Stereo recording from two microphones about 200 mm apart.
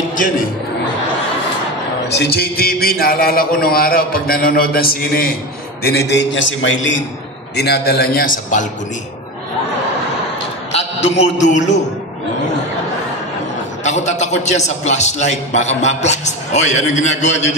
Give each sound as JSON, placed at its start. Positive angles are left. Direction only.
{"t": 2.0, "sound": "a man's voice", "side_deg": 55}
{"t": 7.5, "sound": "a man's voice", "side_deg": 55}
{"t": 10.7, "sound": "a man's voice", "side_deg": 30}
{"t": 13.8, "sound": "a man's voice", "side_deg": 35}